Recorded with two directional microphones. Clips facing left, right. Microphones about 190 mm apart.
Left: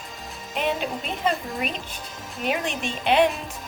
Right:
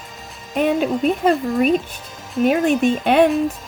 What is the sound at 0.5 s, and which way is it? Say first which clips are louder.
Speech: right 8 dB; 50° right (ahead or behind).